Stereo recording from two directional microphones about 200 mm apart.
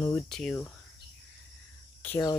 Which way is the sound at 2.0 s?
10° left (ahead or behind).